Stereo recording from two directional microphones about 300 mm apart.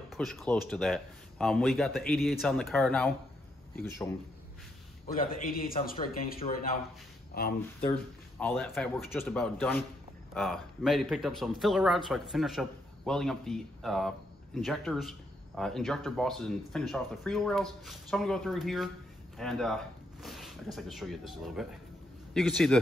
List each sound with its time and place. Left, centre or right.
0.1 s a man's voice: centre
5.0 s a man's voice: left
8.4 s a man's voice: centre
19.3 s a sound: centre
20.7 s a man's voice: centre